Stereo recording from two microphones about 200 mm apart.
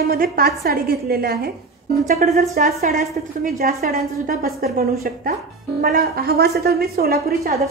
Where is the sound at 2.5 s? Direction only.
45° right (ahead or behind).